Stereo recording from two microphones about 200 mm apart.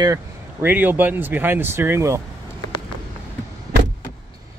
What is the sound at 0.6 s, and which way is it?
Speech, 10° right (ahead or behind).